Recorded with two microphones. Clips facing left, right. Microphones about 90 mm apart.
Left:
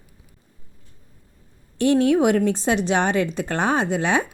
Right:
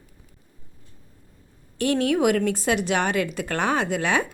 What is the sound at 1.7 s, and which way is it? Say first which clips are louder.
Speech: left 5 dB; 25° left (ahead or behind).